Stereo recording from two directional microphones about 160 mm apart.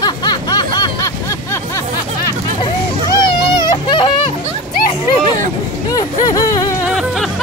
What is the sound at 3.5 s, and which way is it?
Baby cry, 30° left (ahead or behind).